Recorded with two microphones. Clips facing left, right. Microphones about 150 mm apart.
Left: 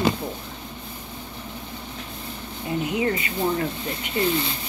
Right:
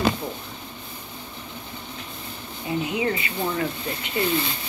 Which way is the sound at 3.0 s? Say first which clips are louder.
Left 2 dB; 40° left (ahead or behind).